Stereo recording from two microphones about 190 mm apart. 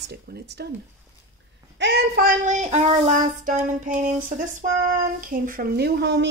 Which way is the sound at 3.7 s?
45° right (ahead or behind).